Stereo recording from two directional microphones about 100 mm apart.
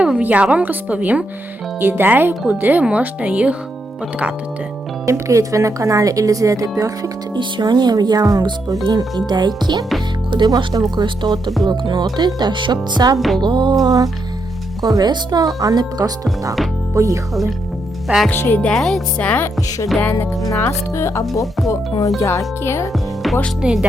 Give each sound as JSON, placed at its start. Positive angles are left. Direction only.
{"t": 0.0, "sound": "a woman's voice", "side_deg": -15}
{"t": 5.0, "sound": "speech", "side_deg": -30}
{"t": 7.3, "sound": "speech", "side_deg": -50}
{"t": 13.1, "sound": "music", "side_deg": 0}
{"t": 13.4, "sound": "speech", "side_deg": -50}
{"t": 18.3, "sound": "speech", "side_deg": 20}
{"t": 20.0, "sound": "speech", "side_deg": 20}
{"t": 22.9, "sound": "a woman's voice", "side_deg": 0}